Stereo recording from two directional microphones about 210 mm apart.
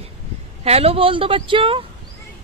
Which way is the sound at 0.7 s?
30° right (ahead or behind).